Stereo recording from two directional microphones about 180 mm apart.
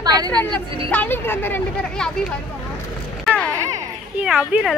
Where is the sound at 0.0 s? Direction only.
20° right (ahead or behind).